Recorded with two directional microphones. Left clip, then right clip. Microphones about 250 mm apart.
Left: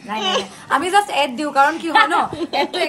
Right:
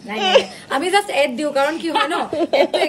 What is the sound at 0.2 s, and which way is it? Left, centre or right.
A woman's voice, centre.